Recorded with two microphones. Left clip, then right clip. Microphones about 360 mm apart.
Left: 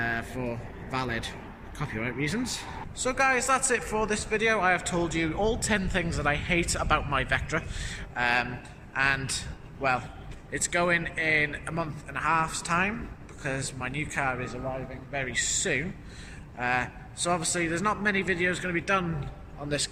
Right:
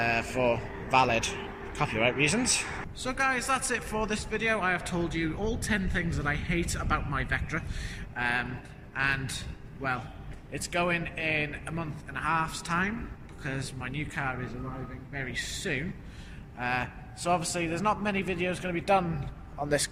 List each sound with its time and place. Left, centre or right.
0.0 s a man's voice: centre
10.5 s a man's voice: centre